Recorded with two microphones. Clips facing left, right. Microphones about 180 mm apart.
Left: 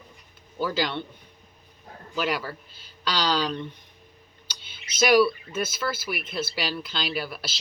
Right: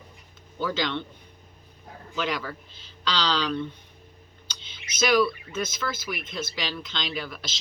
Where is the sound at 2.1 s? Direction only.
10° left (ahead or behind).